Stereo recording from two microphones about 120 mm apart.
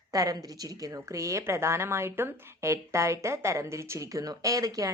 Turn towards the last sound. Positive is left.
turn(degrees=-30)  # may be behind; listen again after turning